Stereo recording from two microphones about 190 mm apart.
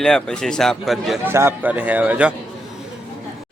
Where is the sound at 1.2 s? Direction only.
10° right (ahead or behind).